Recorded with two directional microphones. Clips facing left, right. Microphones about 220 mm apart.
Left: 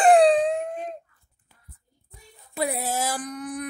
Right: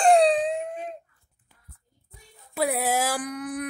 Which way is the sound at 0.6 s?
45° left (ahead or behind).